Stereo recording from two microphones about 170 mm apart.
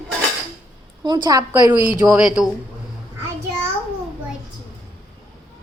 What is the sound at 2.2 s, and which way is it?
Speech, 5° right (ahead or behind).